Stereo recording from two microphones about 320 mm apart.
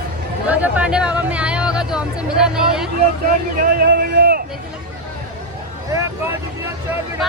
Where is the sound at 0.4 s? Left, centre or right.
Centre.